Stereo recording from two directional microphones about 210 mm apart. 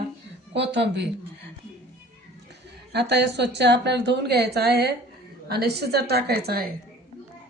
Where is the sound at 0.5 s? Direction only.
55° right (ahead or behind).